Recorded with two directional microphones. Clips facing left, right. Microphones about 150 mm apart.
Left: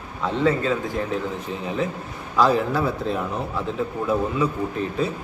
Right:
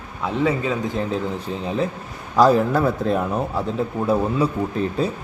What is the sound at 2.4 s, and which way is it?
Speech, 45° right (ahead or behind).